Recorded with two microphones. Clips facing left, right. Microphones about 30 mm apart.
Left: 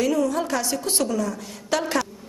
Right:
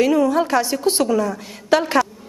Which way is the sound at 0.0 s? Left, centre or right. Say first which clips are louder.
Right 6 dB; right.